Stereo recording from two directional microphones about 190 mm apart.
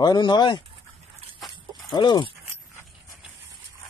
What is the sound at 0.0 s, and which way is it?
Speech, 20° left (ahead or behind).